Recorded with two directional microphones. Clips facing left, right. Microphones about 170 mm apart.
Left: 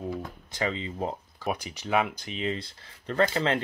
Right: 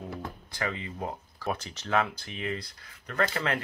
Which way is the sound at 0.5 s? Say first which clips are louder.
Left 4 dB; 20° left (ahead or behind).